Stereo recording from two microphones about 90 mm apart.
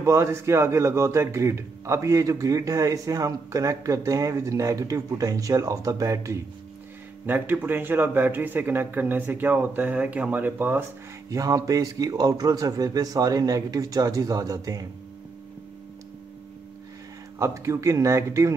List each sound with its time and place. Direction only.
0.0 s a man's voice: 30° right (ahead or behind)
7.2 s speech: 20° right (ahead or behind)
11.2 s a man's voice: 40° right (ahead or behind)
17.4 s a man's voice: 35° right (ahead or behind)